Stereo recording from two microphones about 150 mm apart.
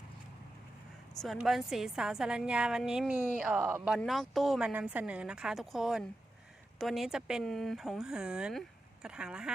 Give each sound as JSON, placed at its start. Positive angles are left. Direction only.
{"t": 1.2, "sound": "speech", "side_deg": 0}
{"t": 3.6, "sound": "speech", "side_deg": -15}
{"t": 3.8, "sound": "speech", "side_deg": 0}